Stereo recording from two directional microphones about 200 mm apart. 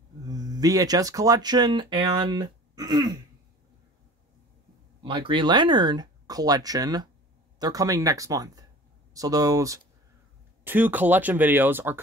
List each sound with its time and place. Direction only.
0.3 s speech: 20° right (ahead or behind)
5.0 s speech: 25° right (ahead or behind); by 12.0 s 10° right (ahead or behind)